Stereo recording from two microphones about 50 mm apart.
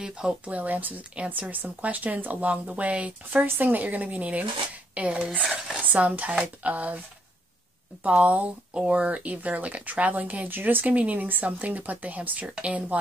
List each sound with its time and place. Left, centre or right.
0.0 s speech: centre
0.5 s speech: right
3.4 s speech: right
8.0 s speech: right